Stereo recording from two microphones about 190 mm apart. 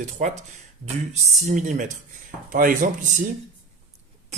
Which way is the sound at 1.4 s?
40° right (ahead or behind).